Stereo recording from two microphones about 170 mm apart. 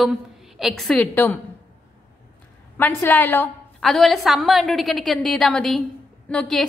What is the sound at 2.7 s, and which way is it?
Speech, 10° left (ahead or behind).